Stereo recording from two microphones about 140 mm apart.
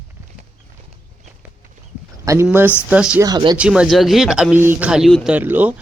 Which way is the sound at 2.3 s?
20° right (ahead or behind).